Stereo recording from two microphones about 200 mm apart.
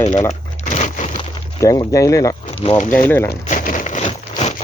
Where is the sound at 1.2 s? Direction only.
25° left (ahead or behind).